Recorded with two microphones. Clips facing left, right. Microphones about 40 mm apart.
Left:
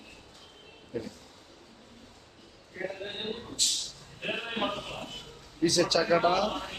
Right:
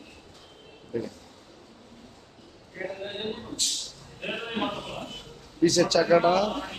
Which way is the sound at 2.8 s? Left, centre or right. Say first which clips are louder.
Right 3 dB; centre.